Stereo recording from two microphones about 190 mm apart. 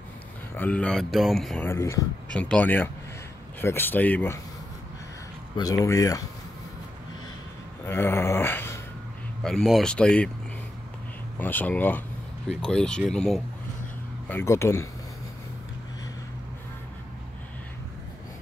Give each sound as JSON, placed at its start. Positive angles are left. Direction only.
{"t": 0.6, "sound": "speech", "side_deg": 5}
{"t": 1.7, "sound": "speech", "side_deg": 15}
{"t": 5.6, "sound": "speech", "side_deg": 20}
{"t": 7.8, "sound": "a sound", "side_deg": 10}
{"t": 9.4, "sound": "speech", "side_deg": 0}
{"t": 11.3, "sound": "speech", "side_deg": 10}
{"t": 14.3, "sound": "speech", "side_deg": 15}